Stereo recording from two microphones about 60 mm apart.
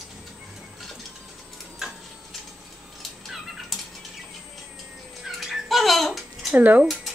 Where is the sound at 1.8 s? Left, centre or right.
Centre.